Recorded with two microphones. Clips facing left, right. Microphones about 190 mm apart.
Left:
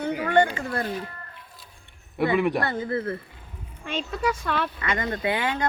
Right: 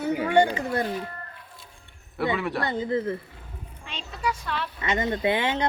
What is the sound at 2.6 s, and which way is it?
Speech, 15° right (ahead or behind).